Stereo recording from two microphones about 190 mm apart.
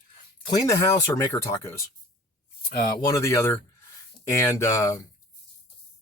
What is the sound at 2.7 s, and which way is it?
Speech, 45° left (ahead or behind).